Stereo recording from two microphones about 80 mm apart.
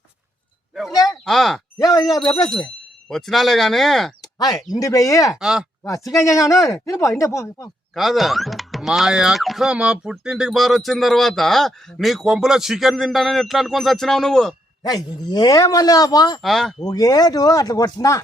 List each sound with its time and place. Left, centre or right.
0.7 s a sound: centre
1.2 s speech: centre
1.8 s speech: left
3.1 s speech: centre
4.2 s speech: left
5.4 s speech: centre
5.8 s speech: left
7.9 s speech: centre
14.8 s speech: left
16.4 s speech: centre
16.8 s speech: left